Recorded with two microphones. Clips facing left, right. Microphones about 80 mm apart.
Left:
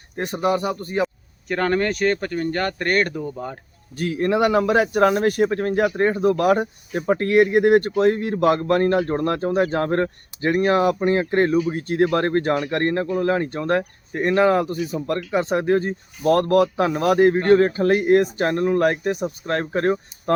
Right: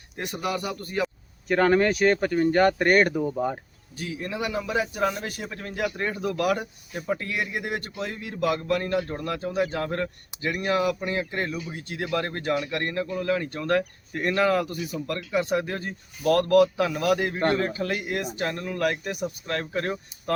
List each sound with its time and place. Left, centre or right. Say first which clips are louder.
0.2 s speech: left 8 dB; left
1.0 s speech: left 3 dB; centre
3.9 s speech: left 11 dB; left
7.1 s speech: left 13 dB; left